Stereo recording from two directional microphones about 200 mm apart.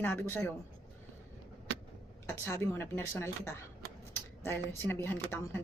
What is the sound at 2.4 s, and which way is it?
Speech, 15° left (ahead or behind).